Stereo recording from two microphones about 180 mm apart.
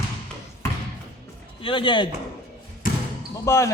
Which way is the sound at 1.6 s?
30° left (ahead or behind).